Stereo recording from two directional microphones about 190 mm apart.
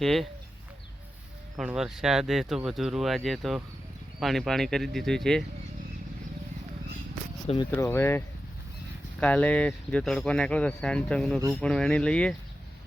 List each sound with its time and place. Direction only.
0.0 s speech: centre (ahead or behind)
1.5 s speech: 5° right (ahead or behind)
7.4 s speech: 25° left (ahead or behind)
7.8 s speech: 10° left (ahead or behind)
9.2 s speech: 5° left (ahead or behind)